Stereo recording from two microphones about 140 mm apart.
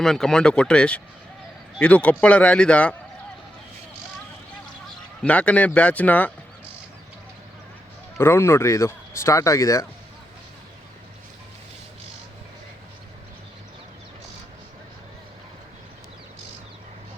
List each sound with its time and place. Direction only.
0.0 s speech: 5° left (ahead or behind)
5.2 s speech: 10° left (ahead or behind)
8.2 s speech: 15° left (ahead or behind)